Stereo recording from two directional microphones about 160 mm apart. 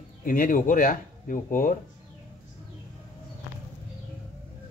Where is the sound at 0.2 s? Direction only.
60° left (ahead or behind).